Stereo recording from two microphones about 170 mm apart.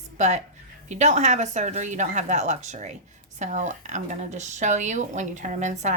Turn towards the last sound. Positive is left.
turn(degrees=-45)  # may be behind; listen again after turning